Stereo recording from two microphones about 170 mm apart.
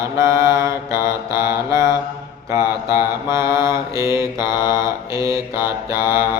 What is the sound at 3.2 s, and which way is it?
Mantra, 15° right (ahead or behind).